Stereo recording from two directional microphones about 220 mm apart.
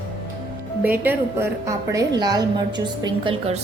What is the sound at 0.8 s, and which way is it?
A woman's voice, 10° right (ahead or behind).